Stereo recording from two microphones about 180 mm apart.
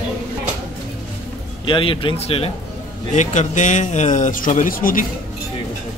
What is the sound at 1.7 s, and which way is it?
A man's voice, 30° left (ahead or behind).